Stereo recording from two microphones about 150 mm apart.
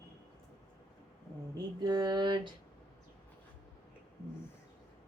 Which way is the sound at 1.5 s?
25° right (ahead or behind).